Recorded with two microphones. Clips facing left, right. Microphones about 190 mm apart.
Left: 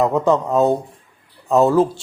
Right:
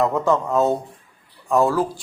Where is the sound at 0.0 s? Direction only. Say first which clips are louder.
Left 3 dB; 20° left (ahead or behind).